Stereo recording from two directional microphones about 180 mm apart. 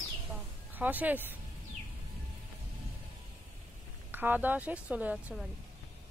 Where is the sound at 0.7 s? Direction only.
10° right (ahead or behind).